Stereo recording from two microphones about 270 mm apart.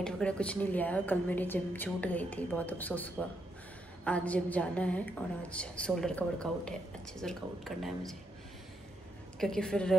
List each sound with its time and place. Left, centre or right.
0.0 s a woman's voice: centre
9.4 s a woman's voice: centre